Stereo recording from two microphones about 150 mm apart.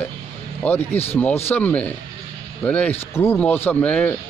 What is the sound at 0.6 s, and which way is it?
A man's voice, 15° left (ahead or behind).